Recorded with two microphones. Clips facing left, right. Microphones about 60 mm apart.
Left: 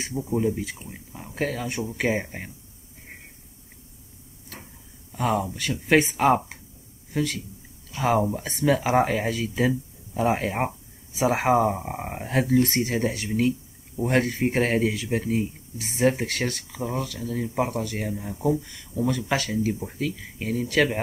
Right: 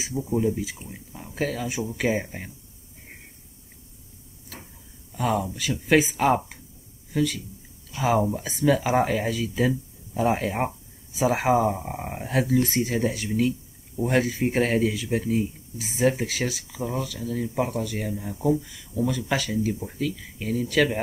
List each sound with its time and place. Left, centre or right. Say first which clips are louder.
0.2 s speech: even; centre
5.1 s a man's voice: even; centre
11.7 s speech: left 1 dB; centre
19.5 s speech: even; centre